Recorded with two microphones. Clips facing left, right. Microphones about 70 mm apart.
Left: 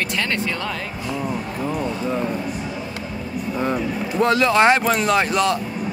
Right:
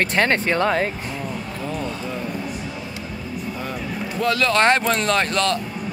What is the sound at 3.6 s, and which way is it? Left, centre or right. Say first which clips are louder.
Speech: left 9 dB; left.